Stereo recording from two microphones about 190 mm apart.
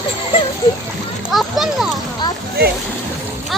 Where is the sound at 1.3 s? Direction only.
Centre (ahead or behind).